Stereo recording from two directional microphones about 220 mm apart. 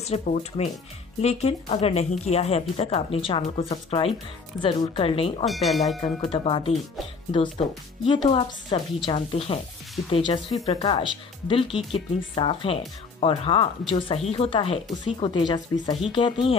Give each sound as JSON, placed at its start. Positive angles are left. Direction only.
{"t": 0.0, "sound": "speech", "side_deg": 30}
{"t": 5.4, "sound": "speech", "side_deg": 0}
{"t": 5.9, "sound": "speech", "side_deg": 25}